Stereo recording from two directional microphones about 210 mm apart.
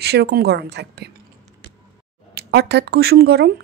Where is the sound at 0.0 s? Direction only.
50° right (ahead or behind).